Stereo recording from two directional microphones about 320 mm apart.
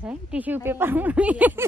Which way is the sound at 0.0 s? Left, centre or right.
Centre.